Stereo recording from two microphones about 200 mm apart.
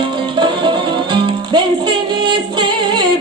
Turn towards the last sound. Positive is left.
turn(degrees=-25)  # may be behind; listen again after turning